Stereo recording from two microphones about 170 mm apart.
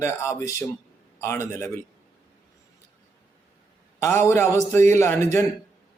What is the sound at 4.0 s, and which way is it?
Speech, 15° left (ahead or behind).